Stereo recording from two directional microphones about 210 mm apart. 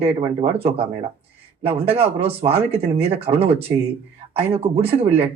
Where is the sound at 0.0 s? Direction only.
30° right (ahead or behind).